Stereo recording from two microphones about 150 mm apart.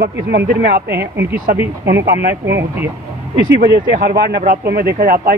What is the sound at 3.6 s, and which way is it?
A man's voice, 85° right.